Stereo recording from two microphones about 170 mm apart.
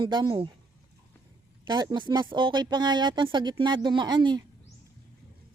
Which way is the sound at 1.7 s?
25° right (ahead or behind).